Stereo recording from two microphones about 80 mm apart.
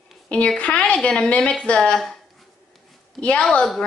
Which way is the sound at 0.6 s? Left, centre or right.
Centre.